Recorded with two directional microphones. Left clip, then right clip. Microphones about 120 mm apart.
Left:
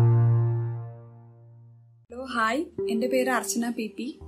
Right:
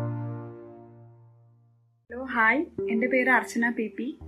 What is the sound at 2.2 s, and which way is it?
Music, 30° left (ahead or behind).